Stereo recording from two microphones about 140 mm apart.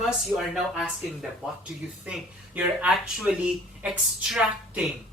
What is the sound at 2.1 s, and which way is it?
Speech, 10° right (ahead or behind).